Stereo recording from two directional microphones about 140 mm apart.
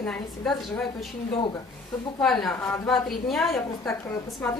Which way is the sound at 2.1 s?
5° left (ahead or behind).